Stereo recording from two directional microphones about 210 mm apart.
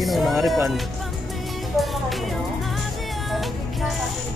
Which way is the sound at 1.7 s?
Centre (ahead or behind).